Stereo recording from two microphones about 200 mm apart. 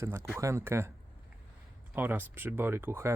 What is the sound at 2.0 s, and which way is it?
Speech, 10° right (ahead or behind).